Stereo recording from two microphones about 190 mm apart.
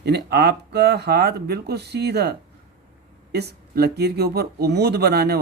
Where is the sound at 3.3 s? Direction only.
60° right (ahead or behind).